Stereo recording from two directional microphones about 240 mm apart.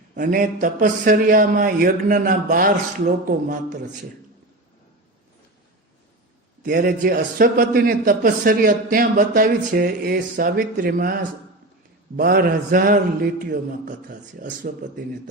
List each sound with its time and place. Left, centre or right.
0.1 s a man's voice: right
6.6 s a man's voice: right